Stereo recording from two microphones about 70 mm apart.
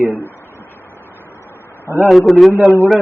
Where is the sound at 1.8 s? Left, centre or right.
Right.